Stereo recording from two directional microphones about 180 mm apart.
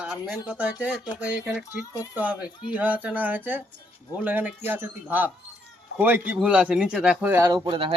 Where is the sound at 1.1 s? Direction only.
5° right (ahead or behind).